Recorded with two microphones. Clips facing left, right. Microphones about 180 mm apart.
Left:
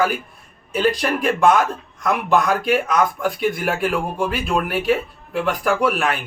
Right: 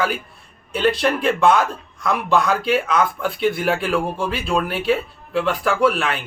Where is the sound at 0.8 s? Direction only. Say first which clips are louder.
Even; 15° left (ahead or behind).